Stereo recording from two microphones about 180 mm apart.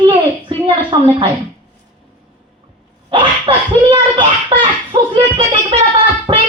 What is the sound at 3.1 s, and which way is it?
Speech, 30° right (ahead or behind).